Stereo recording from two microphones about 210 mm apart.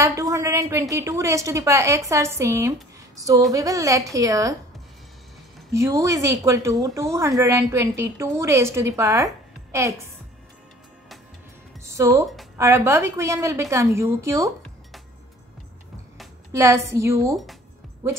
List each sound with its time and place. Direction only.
0.0 s speech: 15° right (ahead or behind)
5.7 s speech: 15° right (ahead or behind)
11.8 s speech: 15° right (ahead or behind)
16.5 s speech: 15° right (ahead or behind)